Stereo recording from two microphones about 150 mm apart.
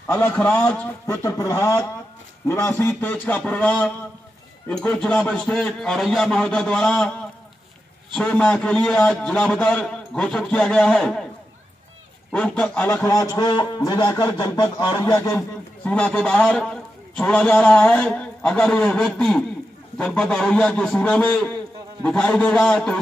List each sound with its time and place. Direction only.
0.0 s a man's voice: 10° left (ahead or behind)
1.2 s a man's voice: 20° left (ahead or behind); by 7.1 s 5° left (ahead or behind)
8.1 s a man's voice: 5° left (ahead or behind)
12.3 s a man's voice: 5° left (ahead or behind)
12.8 s a man's voice: 20° left (ahead or behind)
15.8 s a man's voice: 5° left (ahead or behind)